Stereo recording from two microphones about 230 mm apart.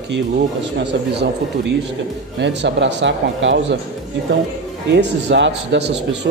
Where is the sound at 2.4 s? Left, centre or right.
Right.